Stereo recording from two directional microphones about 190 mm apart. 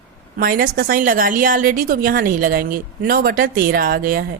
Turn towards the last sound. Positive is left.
turn(degrees=-55)  # may be behind; listen again after turning